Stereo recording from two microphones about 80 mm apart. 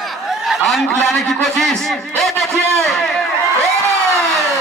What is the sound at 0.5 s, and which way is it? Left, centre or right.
A man's voice, centre.